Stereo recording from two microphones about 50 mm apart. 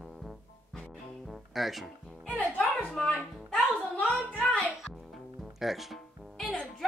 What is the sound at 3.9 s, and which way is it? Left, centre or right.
Speech, left.